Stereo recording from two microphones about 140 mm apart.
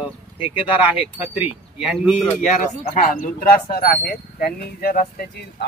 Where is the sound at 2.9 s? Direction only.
75° left (ahead or behind).